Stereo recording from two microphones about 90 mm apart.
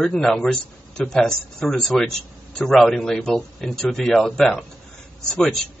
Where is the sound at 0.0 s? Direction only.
5° left (ahead or behind).